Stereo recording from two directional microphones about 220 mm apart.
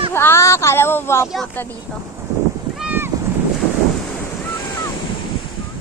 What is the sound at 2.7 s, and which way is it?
Boat, 5° right (ahead or behind).